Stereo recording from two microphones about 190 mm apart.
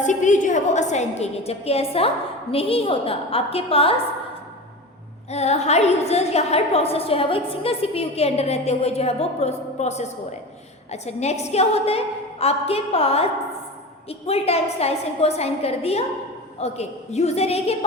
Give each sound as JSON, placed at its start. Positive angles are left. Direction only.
{"t": 0.0, "sound": "a woman's voice", "side_deg": 40}
{"t": 5.3, "sound": "a woman's voice", "side_deg": 35}